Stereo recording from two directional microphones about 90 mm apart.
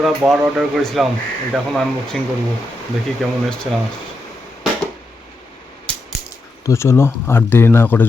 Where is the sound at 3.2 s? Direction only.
10° left (ahead or behind).